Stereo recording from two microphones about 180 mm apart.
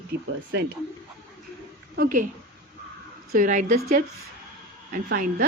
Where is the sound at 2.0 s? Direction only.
50° right (ahead or behind).